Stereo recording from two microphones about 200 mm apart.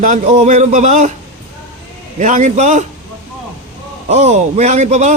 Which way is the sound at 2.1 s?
40° right (ahead or behind).